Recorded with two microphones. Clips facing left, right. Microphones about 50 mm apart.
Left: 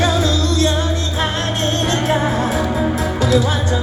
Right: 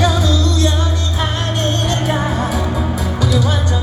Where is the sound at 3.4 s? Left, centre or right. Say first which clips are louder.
Even; left.